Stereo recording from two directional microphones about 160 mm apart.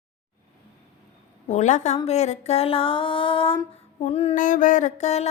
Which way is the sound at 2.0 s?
45° left (ahead or behind).